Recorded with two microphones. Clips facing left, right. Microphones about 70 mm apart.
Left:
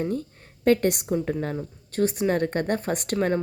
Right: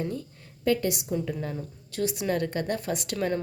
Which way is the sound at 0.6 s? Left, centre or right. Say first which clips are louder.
Left 5 dB; left.